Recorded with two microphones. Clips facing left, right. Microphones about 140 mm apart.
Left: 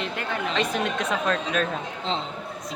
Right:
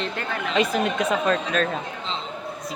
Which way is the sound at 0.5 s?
5° right (ahead or behind).